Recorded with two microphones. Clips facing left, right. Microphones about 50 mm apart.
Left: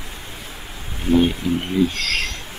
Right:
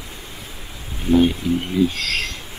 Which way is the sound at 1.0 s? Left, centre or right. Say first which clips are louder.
Right 1 dB; centre.